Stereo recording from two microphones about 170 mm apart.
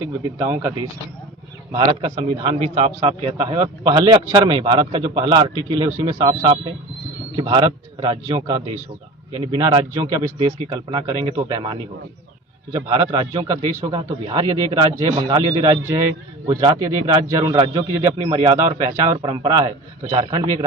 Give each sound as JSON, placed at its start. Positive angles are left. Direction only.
{"t": 0.2, "sound": "speech", "side_deg": -15}
{"t": 1.8, "sound": "a man's voice", "side_deg": -35}
{"t": 18.2, "sound": "a man's voice", "side_deg": -35}
{"t": 18.5, "sound": "a man's voice", "side_deg": -20}